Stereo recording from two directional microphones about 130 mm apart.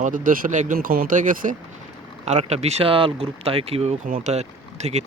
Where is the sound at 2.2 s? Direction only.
60° right (ahead or behind).